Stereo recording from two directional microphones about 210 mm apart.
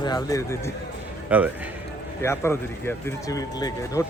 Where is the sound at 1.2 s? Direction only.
5° right (ahead or behind).